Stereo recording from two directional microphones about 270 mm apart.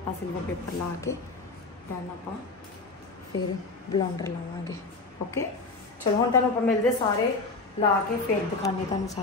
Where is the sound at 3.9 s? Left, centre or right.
Centre.